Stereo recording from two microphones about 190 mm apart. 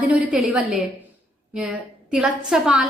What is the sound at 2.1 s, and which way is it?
Speech, 5° right (ahead or behind).